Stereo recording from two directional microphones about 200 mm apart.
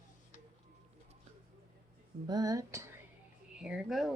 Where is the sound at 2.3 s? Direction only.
20° right (ahead or behind).